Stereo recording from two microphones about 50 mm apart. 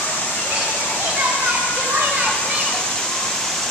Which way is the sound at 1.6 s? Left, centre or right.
Left.